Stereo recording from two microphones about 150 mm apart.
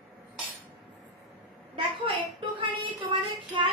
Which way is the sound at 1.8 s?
35° right (ahead or behind).